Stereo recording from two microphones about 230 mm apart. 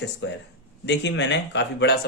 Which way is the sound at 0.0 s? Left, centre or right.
Left.